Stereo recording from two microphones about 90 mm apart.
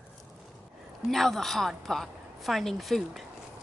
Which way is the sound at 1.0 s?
Centre (ahead or behind).